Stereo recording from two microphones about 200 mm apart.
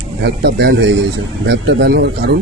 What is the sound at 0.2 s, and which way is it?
A man's voice, 55° right (ahead or behind).